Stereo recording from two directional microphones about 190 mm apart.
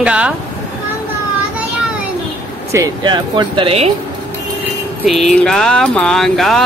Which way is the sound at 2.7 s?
20° right (ahead or behind).